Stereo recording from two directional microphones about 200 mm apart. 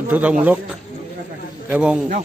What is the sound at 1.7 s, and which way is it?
Speech, 5° right (ahead or behind).